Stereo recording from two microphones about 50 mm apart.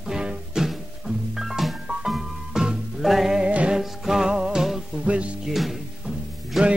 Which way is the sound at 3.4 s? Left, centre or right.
Right.